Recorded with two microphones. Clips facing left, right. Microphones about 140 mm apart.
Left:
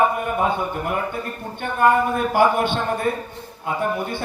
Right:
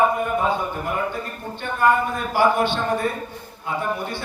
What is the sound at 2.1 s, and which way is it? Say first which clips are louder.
Speech: left 2 dB; 50° left (ahead or behind).